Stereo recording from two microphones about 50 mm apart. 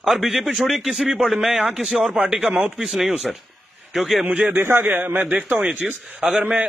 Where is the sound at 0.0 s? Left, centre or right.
Centre.